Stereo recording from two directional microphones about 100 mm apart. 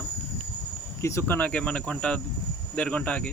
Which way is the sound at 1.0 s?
30° left (ahead or behind).